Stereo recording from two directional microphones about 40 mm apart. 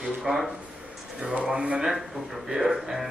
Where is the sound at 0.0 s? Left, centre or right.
Centre.